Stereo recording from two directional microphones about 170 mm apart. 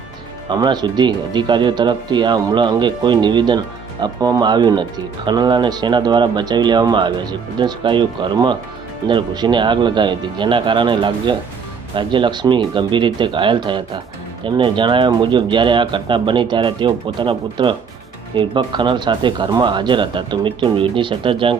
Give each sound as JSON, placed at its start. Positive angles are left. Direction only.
{"t": 0.5, "sound": "speech", "side_deg": -25}